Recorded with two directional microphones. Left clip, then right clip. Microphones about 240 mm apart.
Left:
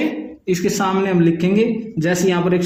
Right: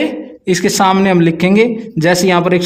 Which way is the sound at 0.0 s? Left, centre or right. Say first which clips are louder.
Right 5 dB; right.